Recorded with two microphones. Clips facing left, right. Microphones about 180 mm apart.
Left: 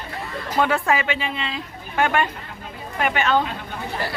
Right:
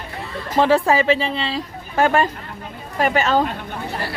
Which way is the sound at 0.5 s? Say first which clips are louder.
Right 5 dB; 30° right (ahead or behind).